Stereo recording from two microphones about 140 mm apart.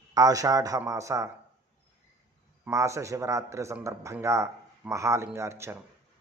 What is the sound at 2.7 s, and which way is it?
Speech, 20° right (ahead or behind).